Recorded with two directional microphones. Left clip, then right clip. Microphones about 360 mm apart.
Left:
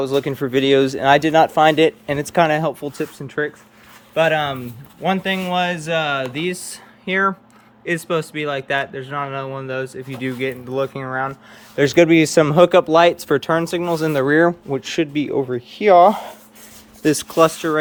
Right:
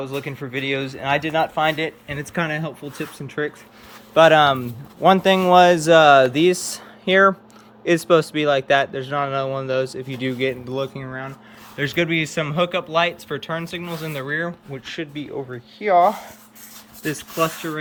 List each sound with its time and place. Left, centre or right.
0.1 s speech: centre
2.1 s speech: centre